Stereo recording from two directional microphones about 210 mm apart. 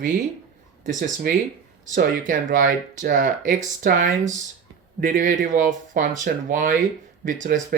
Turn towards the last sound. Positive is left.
turn(degrees=-40)  # may be behind; listen again after turning